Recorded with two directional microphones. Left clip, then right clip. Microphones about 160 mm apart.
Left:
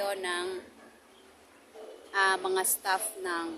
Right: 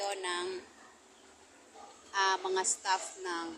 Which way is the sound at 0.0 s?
15° left (ahead or behind).